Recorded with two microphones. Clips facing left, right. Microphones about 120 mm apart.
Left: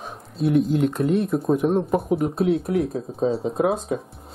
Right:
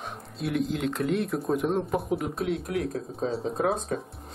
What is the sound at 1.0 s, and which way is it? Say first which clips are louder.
Speech: left 6 dB; 25° left (ahead or behind).